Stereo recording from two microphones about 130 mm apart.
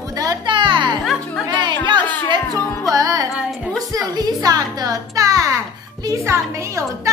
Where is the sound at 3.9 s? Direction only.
30° right (ahead or behind).